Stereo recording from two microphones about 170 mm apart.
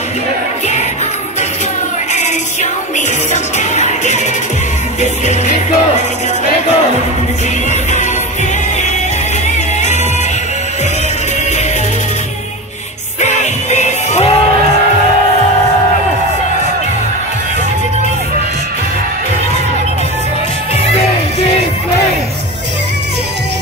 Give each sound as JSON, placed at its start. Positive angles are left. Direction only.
{"t": 3.5, "sound": "music", "side_deg": 45}
{"t": 5.2, "sound": "music", "side_deg": 45}
{"t": 13.2, "sound": "music", "side_deg": 45}